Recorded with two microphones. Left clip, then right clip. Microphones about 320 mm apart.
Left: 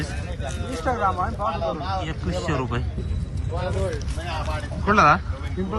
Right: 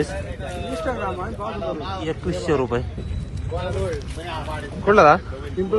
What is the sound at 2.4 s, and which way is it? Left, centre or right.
Speech, centre.